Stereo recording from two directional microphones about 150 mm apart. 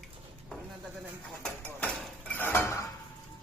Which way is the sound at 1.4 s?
5° left (ahead or behind).